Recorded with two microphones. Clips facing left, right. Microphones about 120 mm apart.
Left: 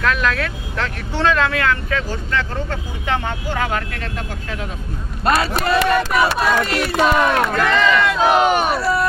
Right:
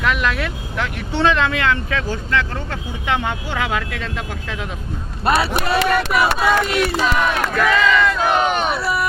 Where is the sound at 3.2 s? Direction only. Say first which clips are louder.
Even; 15° right (ahead or behind).